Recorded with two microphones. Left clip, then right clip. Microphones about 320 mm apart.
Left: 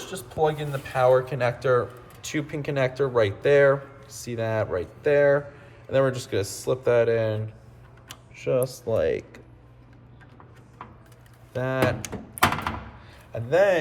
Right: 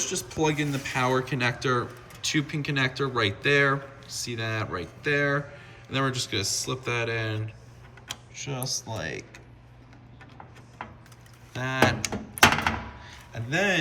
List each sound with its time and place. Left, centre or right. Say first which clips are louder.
0.1 s speech: left 7 dB; centre
8.4 s speech: left 9 dB; centre
11.5 s speech: even; centre
12.0 s thunk: right 3 dB; centre
13.1 s a sound: left 9 dB; centre